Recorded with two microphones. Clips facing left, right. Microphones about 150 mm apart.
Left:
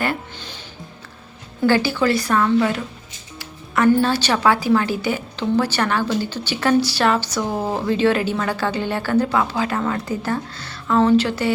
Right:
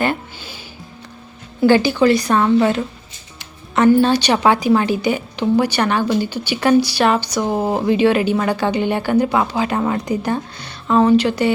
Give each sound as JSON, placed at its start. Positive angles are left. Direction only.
{"t": 0.3, "sound": "music", "side_deg": -10}
{"t": 1.6, "sound": "a woman's voice", "side_deg": -20}
{"t": 3.9, "sound": "a woman's voice", "side_deg": -15}